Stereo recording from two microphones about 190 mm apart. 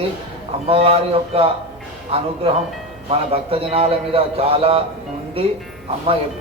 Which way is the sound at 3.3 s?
30° right (ahead or behind).